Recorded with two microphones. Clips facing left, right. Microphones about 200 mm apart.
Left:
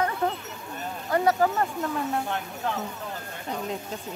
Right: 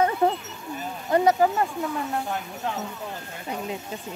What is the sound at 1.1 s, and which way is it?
Speech, 15° right (ahead or behind).